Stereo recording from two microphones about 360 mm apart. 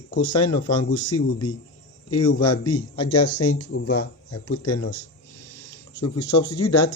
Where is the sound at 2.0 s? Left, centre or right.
Centre.